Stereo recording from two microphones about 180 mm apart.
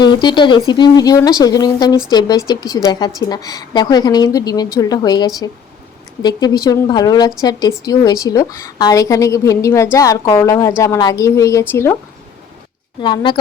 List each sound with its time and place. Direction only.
0.0 s a woman's voice: 25° left (ahead or behind)
13.0 s a woman's voice: 25° left (ahead or behind)